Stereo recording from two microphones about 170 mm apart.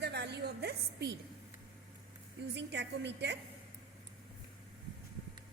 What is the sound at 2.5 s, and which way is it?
Speech, 90° right.